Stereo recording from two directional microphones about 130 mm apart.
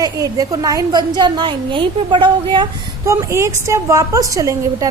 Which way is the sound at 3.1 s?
25° right (ahead or behind).